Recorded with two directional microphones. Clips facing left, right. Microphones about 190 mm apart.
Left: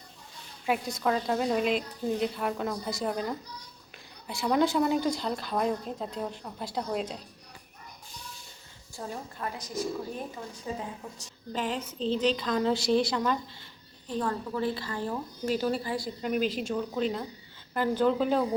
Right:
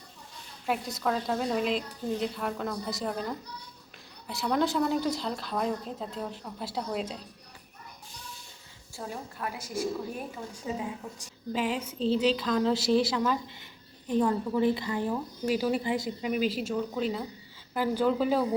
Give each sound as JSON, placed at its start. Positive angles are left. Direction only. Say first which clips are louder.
{"t": 0.6, "sound": "a woman's voice", "louder": "left 2 dB", "side_deg": 0}
{"t": 4.4, "sound": "a woman's voice", "louder": "left 2 dB", "side_deg": 0}
{"t": 9.0, "sound": "a woman's voice", "louder": "even", "side_deg": -5}
{"t": 14.1, "sound": "a woman's voice", "louder": "right 5 dB", "side_deg": -15}
{"t": 15.8, "sound": "a woman's voice", "louder": "right 3 dB", "side_deg": -20}
{"t": 16.2, "sound": "a woman's voice", "louder": "left 2 dB", "side_deg": -5}